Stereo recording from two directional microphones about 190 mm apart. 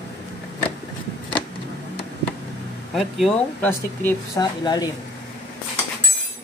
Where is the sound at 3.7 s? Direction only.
15° left (ahead or behind).